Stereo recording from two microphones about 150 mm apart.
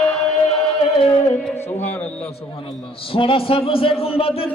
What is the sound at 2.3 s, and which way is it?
A man's voice, 40° left (ahead or behind).